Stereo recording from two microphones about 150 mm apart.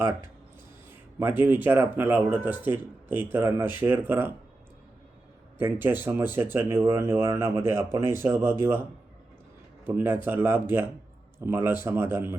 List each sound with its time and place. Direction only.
0.9 s speech: 15° right (ahead or behind)
5.5 s speech: 15° right (ahead or behind)
9.8 s speech: 15° right (ahead or behind)